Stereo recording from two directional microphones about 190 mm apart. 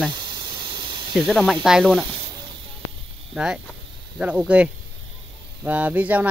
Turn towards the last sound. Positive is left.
turn(degrees=-10)  # may be behind; listen again after turning